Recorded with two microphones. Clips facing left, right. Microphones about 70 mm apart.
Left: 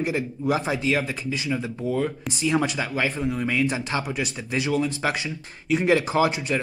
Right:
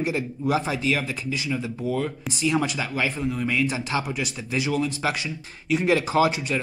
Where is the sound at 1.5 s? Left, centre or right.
Centre.